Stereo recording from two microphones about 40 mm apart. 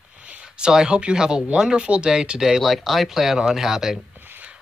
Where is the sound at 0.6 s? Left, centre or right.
Centre.